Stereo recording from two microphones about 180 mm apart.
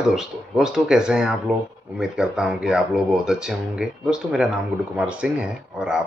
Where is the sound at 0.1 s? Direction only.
Centre (ahead or behind).